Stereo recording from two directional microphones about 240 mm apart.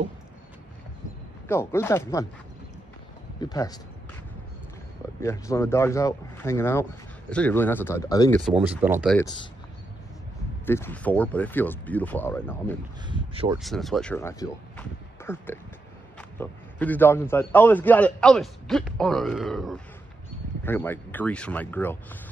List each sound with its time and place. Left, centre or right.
1.5 s a man's voice: centre
3.3 s a man's voice: centre
5.2 s a man's voice: centre
8.5 s speech: centre
9.2 s speech: centre
10.6 s a man's voice: centre
13.0 s a sound: right
13.6 s a man's voice: centre